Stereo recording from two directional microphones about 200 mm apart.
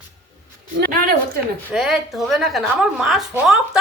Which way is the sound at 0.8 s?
50° right (ahead or behind).